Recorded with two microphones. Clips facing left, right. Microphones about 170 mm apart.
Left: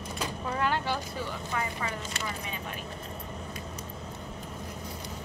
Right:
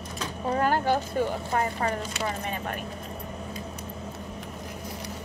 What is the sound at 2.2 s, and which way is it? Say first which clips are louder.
Speech: right 6 dB; 50° right (ahead or behind).